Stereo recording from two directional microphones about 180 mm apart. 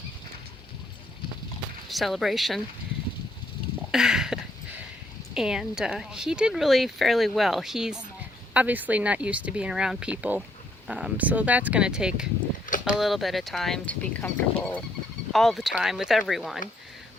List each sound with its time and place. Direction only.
1.9 s speech: centre (ahead or behind)
3.9 s a sound: centre (ahead or behind)
5.3 s speech: 5° right (ahead or behind)